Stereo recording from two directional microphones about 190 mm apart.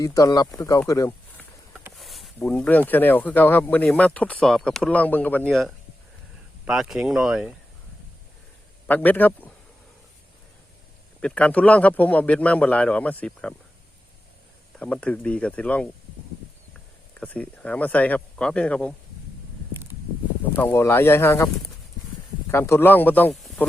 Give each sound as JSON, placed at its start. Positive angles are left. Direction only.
{"t": 0.0, "sound": "speech", "side_deg": 20}
{"t": 2.0, "sound": "speech", "side_deg": 0}
{"t": 8.9, "sound": "speech", "side_deg": 10}
{"t": 11.2, "sound": "speech", "side_deg": 5}
{"t": 14.8, "sound": "speech", "side_deg": 5}
{"t": 17.2, "sound": "speech", "side_deg": 5}
{"t": 20.6, "sound": "speech", "side_deg": 10}